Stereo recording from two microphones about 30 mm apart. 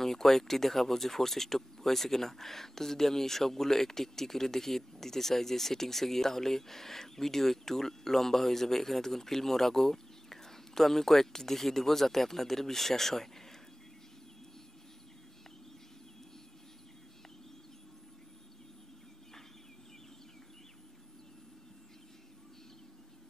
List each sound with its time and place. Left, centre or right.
0.0 s speech: centre